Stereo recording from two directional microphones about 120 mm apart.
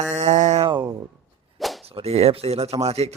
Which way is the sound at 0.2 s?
80° right.